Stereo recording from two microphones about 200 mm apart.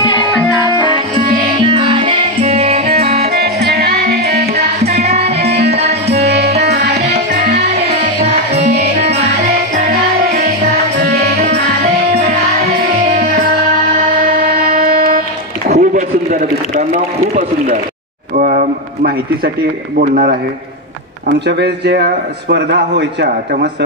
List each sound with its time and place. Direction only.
0.7 s music: 20° left (ahead or behind)
0.9 s music: 30° right (ahead or behind)
3.3 s music: 50° right (ahead or behind)
4.8 s music: 30° right (ahead or behind)
5.5 s music: 50° right (ahead or behind)
5.8 s music: 30° right (ahead or behind)
6.2 s music: 50° right (ahead or behind)
7.2 s music: 35° right (ahead or behind)
11.0 s music: 50° right (ahead or behind)
14.2 s a sound: 40° right (ahead or behind)
21.5 s a man's voice: 55° right (ahead or behind)